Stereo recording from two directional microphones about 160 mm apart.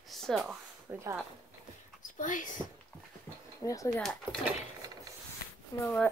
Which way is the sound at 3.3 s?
15° left (ahead or behind).